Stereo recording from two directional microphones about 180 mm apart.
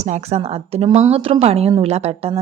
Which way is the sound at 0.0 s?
35° right (ahead or behind).